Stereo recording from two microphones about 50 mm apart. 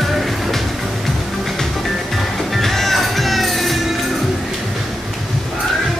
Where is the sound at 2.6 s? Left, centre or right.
Centre.